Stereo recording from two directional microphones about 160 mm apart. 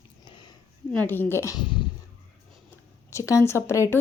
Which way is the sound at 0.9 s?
10° left (ahead or behind).